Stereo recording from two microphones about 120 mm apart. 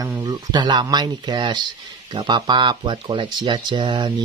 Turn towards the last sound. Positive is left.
turn(degrees=-40)  # may be behind; listen again after turning